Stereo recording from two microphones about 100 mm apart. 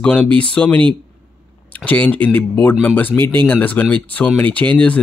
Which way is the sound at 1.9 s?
15° left (ahead or behind).